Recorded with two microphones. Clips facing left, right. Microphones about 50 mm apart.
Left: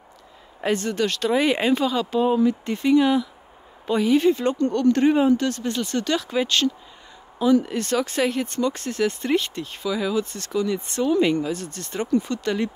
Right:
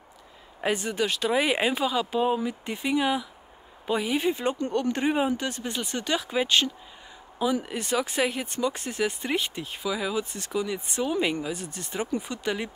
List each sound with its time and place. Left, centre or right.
0.6 s speech: centre